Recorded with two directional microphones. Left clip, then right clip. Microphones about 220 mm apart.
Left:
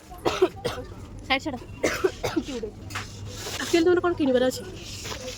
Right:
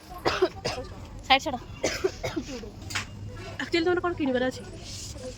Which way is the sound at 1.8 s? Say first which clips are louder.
Left 5 dB; 45° left (ahead or behind).